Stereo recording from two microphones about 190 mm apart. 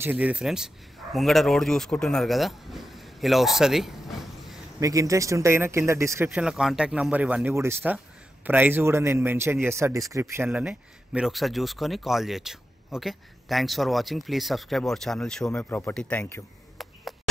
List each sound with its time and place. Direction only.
0.0 s a man's voice: 10° right (ahead or behind)
4.7 s a man's voice: 15° right (ahead or behind); by 16.4 s 10° left (ahead or behind)